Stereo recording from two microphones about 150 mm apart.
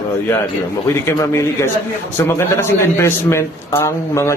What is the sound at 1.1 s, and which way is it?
A man's voice, 20° left (ahead or behind).